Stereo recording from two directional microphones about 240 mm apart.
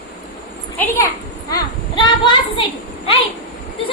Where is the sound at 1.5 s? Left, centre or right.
Centre.